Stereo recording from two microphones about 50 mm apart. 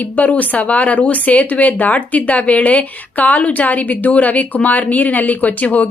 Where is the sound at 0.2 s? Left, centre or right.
Left.